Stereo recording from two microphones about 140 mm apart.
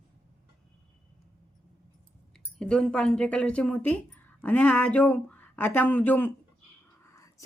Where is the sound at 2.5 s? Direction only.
5° left (ahead or behind).